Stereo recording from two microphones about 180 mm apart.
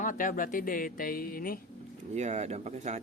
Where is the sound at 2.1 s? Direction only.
40° right (ahead or behind).